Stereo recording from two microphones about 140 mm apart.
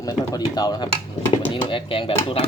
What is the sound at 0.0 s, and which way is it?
Speech, 30° left (ahead or behind).